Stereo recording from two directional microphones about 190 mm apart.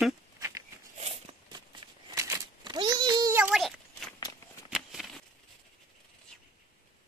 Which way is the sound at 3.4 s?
Centre (ahead or behind).